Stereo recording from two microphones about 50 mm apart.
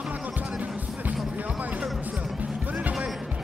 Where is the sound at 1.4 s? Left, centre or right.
Right.